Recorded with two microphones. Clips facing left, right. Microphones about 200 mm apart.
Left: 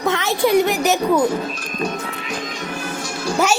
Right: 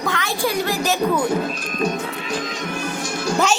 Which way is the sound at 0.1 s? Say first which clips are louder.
Left 8 dB; 20° left (ahead or behind).